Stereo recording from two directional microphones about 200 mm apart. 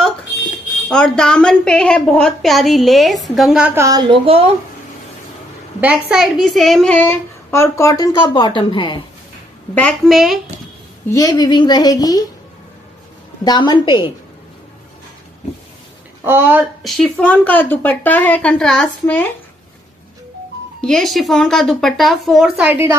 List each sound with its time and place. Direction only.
0.8 s a woman's voice: 5° left (ahead or behind); by 4.5 s 25° right (ahead or behind)
5.8 s a woman's voice: 5° right (ahead or behind); by 9.0 s 25° left (ahead or behind)
9.8 s a woman's voice: 5° left (ahead or behind)
11.1 s a woman's voice: 15° left (ahead or behind)
13.4 s a woman's voice: 20° left (ahead or behind)
16.3 s speech: 10° right (ahead or behind)
16.8 s a woman's voice: centre (ahead or behind)
20.8 s a woman's voice: centre (ahead or behind)